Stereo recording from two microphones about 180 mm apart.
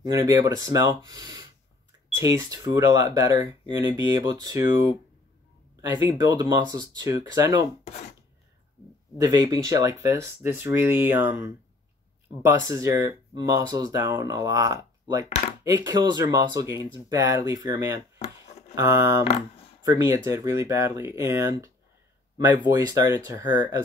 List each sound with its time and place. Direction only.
0.0 s speech: 20° right (ahead or behind)
9.2 s speech: 20° right (ahead or behind)
22.7 s speech: 20° right (ahead or behind)